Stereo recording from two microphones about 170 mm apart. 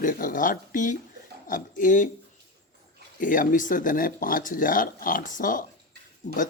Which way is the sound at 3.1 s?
50° left (ahead or behind).